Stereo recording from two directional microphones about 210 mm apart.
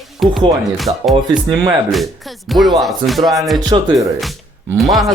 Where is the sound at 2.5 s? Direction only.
Centre (ahead or behind).